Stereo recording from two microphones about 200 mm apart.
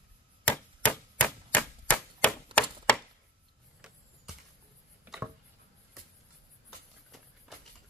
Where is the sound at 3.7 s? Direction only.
5° right (ahead or behind).